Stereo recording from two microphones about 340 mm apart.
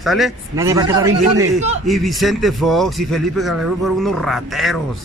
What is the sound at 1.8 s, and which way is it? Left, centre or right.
A man's voice, centre.